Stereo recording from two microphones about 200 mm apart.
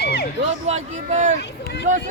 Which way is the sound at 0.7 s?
35° right (ahead or behind).